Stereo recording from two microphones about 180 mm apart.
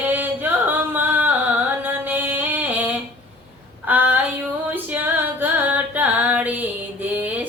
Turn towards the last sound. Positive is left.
turn(degrees=-10)  # may be behind; listen again after turning